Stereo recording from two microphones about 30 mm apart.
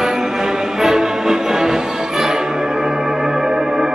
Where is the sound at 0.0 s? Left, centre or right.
Centre.